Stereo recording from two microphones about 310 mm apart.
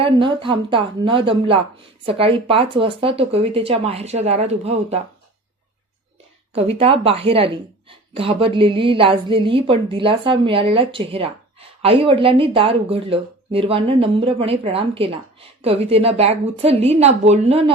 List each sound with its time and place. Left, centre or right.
0.0 s a woman's voice: centre
6.6 s a woman's voice: centre